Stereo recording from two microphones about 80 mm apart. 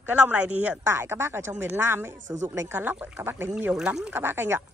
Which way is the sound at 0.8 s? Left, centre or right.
Right.